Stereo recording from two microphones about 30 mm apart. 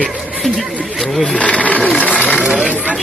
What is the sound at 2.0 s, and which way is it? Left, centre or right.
Speech, left.